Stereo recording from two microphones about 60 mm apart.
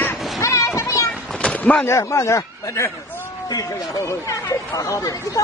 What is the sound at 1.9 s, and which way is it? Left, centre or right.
Speech, left.